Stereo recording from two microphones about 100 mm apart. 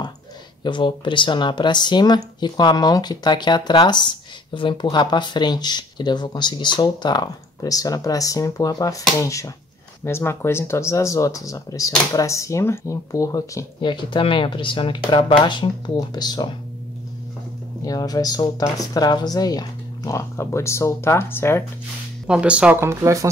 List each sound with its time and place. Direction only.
0.7 s speech: 55° left (ahead or behind); by 13.7 s 35° left (ahead or behind)
13.7 s speech: 50° left (ahead or behind)
17.8 s speech: 40° left (ahead or behind); by 21.6 s 25° left (ahead or behind)
22.2 s speech: 10° right (ahead or behind)
22.8 s speech: 30° right (ahead or behind)